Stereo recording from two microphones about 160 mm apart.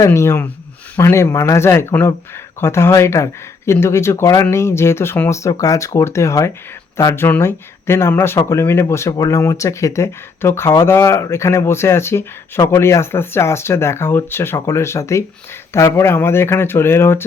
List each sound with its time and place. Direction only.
0.0 s speech: 15° left (ahead or behind)